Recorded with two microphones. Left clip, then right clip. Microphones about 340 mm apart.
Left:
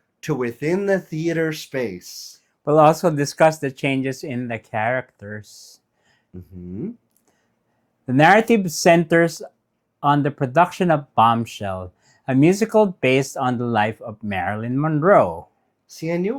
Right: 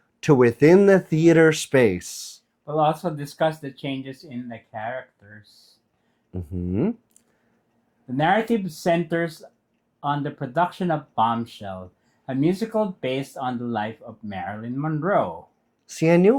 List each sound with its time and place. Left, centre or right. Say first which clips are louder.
0.2 s speech: right 8 dB; right
2.6 s speech: left 8 dB; left
6.3 s speech: right 7 dB; right
8.0 s speech: left 7 dB; left
15.9 s speech: right 7 dB; right